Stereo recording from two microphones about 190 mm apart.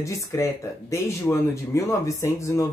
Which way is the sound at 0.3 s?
15° left (ahead or behind).